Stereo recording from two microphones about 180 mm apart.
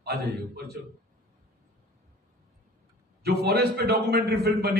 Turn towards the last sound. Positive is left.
turn(degrees=-60)  # may be behind; listen again after turning